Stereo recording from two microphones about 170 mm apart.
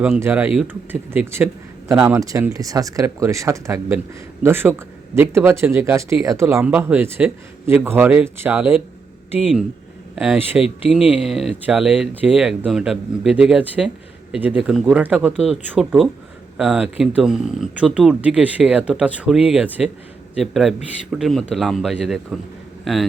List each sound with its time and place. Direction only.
0.2 s speech: 10° right (ahead or behind)
10.2 s speech: 10° right (ahead or behind)